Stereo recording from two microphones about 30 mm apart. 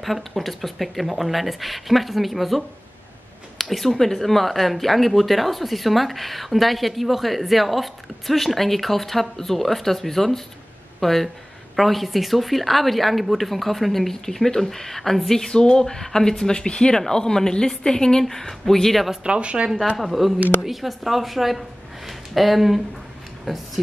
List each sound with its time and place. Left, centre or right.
0.0 s speech: centre
3.6 s speech: centre
19.2 s speech: right
20.1 s a woman's voice: centre